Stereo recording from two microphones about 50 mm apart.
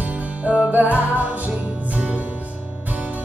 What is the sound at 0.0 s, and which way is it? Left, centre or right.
Music, right.